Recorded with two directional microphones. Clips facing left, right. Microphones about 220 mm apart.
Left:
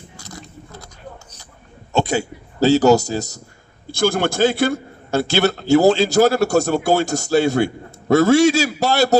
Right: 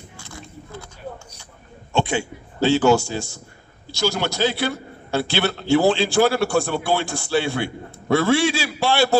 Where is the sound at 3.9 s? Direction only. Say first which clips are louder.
Left 5 dB; 50° left (ahead or behind).